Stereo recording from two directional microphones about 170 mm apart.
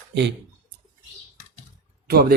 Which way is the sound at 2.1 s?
65° right (ahead or behind).